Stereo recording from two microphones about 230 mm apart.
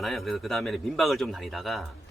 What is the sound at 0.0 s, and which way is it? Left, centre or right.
Speech, centre.